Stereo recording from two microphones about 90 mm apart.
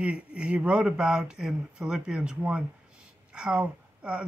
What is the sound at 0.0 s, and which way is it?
Speech, 10° right (ahead or behind).